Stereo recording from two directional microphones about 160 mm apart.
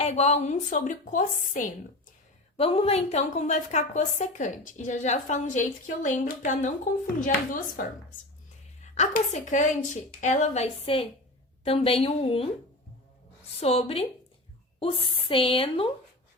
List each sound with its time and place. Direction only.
0.0 s a woman's voice: 45° left (ahead or behind)
2.6 s a woman's voice: 35° left (ahead or behind); by 7.9 s 60° left (ahead or behind)
8.8 s a woman's voice: 50° left (ahead or behind)
13.6 s speech: 40° left (ahead or behind)